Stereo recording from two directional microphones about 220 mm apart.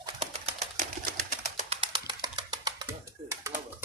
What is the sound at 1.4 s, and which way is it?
Music, 30° right (ahead or behind).